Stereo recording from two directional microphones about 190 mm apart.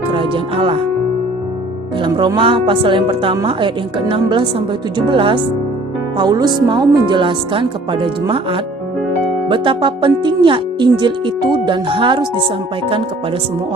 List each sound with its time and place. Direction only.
0.1 s speech: 25° right (ahead or behind)
2.0 s speech: 25° right (ahead or behind)